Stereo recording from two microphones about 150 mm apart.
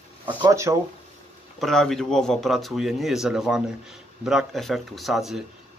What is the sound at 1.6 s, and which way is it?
Speech, 5° left (ahead or behind).